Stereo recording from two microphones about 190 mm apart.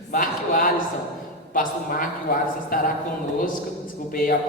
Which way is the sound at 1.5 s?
45° left (ahead or behind).